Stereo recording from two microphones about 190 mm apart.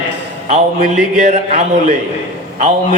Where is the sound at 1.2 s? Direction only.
35° right (ahead or behind).